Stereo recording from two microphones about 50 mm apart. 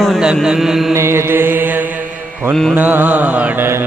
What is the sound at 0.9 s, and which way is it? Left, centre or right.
Mantra, right.